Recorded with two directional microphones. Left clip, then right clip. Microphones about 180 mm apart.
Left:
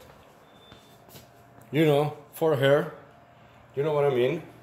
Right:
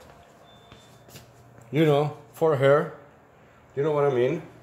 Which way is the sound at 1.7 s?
10° right (ahead or behind).